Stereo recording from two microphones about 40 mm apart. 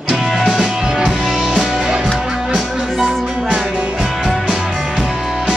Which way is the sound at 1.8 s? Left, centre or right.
Centre.